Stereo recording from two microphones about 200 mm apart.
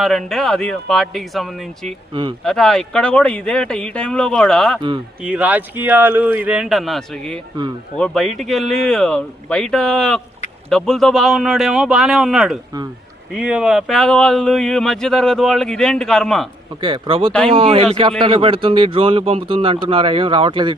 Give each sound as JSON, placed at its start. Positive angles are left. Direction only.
{"t": 0.0, "sound": "speech", "side_deg": 0}
{"t": 16.8, "sound": "speech", "side_deg": -25}